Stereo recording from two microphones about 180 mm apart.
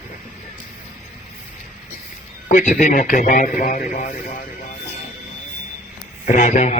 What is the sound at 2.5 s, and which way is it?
Speech, 45° left (ahead or behind).